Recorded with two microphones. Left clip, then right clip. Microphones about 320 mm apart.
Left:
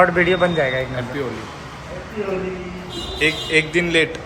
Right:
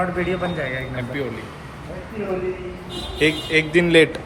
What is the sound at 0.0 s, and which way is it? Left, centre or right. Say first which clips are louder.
Speech: left 8 dB; left.